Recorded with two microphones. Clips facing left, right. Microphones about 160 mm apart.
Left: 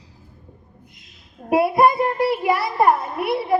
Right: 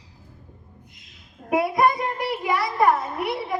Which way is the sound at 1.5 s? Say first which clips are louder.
Left 4 dB; 30° left (ahead or behind).